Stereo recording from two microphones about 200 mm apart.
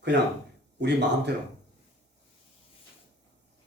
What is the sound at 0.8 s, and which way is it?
Speech, 60° right (ahead or behind).